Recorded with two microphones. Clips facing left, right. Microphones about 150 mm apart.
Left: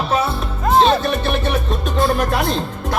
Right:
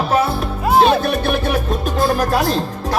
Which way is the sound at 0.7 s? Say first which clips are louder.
Right 1 dB; 10° right (ahead or behind).